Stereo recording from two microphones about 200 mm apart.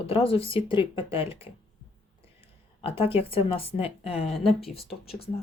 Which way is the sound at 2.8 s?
30° left (ahead or behind).